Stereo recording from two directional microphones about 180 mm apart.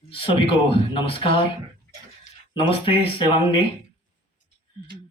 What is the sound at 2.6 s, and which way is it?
Speech, 30° left (ahead or behind).